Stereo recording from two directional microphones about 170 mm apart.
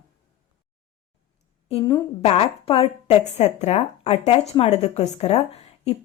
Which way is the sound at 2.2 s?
35° left (ahead or behind).